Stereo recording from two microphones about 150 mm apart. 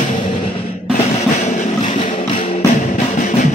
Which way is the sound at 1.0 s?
55° left (ahead or behind).